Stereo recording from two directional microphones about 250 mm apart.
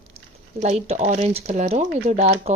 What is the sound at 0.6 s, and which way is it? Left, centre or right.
A woman's voice, right.